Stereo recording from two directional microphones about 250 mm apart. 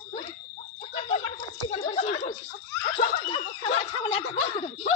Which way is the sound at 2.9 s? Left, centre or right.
Left.